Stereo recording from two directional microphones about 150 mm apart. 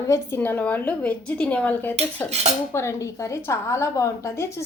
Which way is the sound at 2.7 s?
20° left (ahead or behind).